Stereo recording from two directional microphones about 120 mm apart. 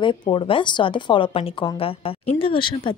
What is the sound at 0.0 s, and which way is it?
A woman's voice, 45° left (ahead or behind).